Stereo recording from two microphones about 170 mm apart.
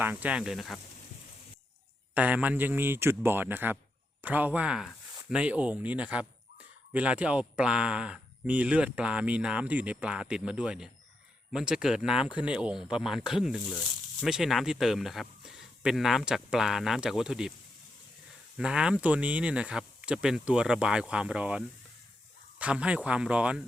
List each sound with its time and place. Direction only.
0.0 s speech: 10° right (ahead or behind)
2.1 s speech: 10° right (ahead or behind)
18.5 s speech: 5° right (ahead or behind)